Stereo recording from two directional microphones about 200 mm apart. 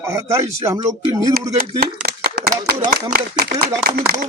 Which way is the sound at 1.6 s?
50° right (ahead or behind).